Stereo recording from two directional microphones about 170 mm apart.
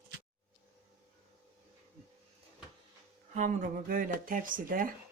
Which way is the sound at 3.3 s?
50° right (ahead or behind).